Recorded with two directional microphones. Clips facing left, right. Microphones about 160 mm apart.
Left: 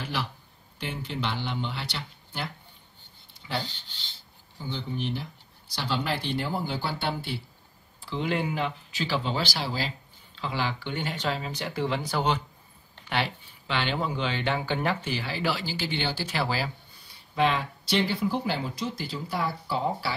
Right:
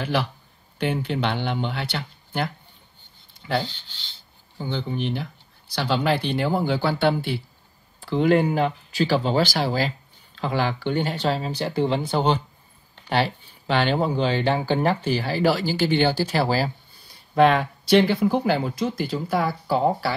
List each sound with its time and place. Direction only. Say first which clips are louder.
0.0 s speech: right 8 dB; 65° right (ahead or behind)
4.6 s speech: right 6 dB; 60° right (ahead or behind)
8.0 s speech: right 10 dB; 50° right (ahead or behind)